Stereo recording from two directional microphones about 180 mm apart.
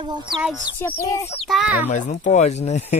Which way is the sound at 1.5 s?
5° right (ahead or behind).